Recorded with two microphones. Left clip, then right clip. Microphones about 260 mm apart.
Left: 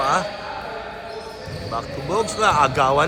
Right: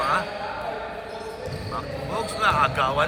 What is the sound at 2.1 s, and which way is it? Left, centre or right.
Speech, centre.